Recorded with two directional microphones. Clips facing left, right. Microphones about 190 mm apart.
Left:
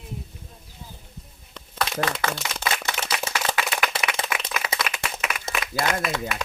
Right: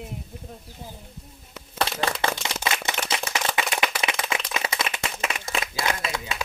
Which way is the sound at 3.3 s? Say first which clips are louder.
Even; 20° right (ahead or behind).